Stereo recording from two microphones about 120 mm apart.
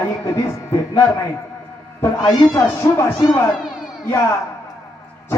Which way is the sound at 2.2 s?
25° left (ahead or behind).